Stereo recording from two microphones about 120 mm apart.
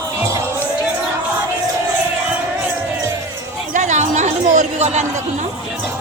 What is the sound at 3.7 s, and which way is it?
Chatter, 85° right.